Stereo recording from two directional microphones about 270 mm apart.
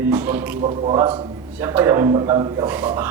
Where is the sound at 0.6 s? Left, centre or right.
Centre.